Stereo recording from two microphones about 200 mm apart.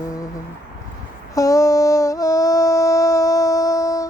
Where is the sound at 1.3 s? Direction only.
15° left (ahead or behind).